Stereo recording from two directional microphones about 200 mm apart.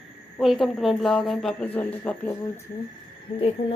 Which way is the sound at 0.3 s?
Centre (ahead or behind).